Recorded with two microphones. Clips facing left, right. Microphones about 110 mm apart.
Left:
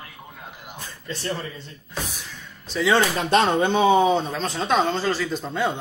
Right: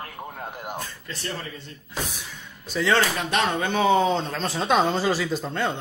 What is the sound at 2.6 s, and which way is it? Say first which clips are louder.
Speech: left 2 dB; centre (ahead or behind).